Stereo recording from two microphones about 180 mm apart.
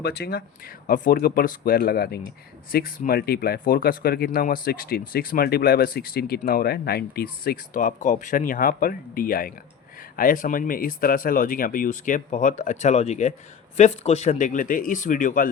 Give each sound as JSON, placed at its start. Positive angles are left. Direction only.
{"t": 0.0, "sound": "speech", "side_deg": 60}